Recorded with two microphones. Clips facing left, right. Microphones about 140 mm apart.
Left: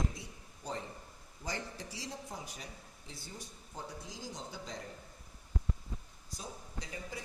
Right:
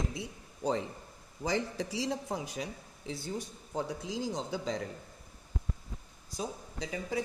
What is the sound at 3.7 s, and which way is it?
Speech, 75° right (ahead or behind).